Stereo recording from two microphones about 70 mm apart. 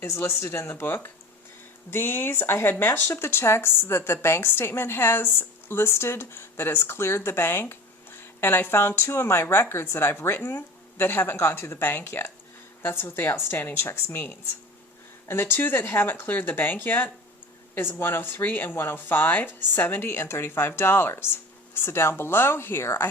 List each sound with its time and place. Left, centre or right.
0.0 s a woman's voice: left